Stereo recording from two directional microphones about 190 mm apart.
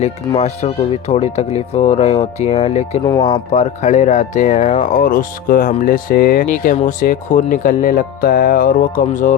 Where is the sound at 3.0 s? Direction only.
20° left (ahead or behind).